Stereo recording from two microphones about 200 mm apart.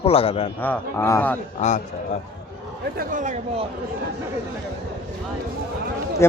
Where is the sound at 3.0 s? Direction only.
40° right (ahead or behind).